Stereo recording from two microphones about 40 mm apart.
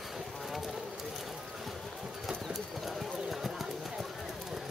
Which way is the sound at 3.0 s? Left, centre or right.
Centre.